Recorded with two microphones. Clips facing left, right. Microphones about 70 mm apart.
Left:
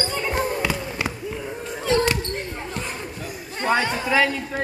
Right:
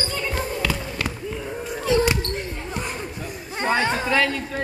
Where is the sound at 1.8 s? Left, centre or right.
Centre.